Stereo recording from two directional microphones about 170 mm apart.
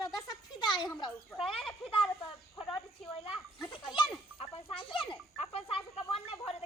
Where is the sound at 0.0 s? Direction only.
25° left (ahead or behind).